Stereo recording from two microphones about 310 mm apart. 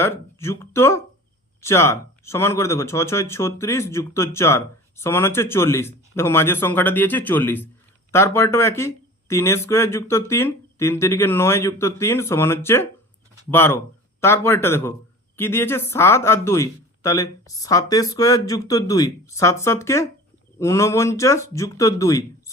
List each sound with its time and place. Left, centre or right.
0.0 s speech: centre